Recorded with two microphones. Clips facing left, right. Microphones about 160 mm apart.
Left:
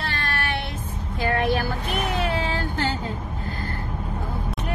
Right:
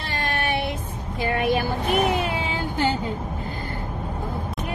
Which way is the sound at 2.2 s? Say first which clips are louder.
Left 1 dB; 15° right (ahead or behind).